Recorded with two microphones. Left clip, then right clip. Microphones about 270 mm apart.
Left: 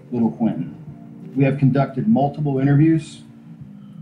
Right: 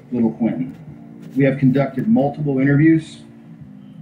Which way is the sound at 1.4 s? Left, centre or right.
Left.